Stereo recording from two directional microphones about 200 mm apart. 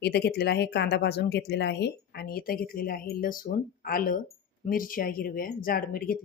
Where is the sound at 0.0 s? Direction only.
55° left (ahead or behind).